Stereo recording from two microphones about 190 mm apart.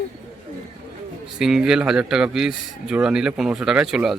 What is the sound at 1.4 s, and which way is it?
A man's voice, 5° right (ahead or behind).